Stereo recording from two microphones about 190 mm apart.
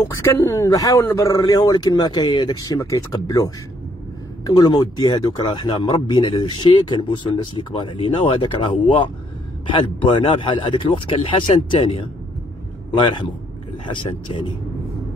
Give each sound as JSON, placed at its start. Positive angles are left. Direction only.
{"t": 0.0, "sound": "speech", "side_deg": 15}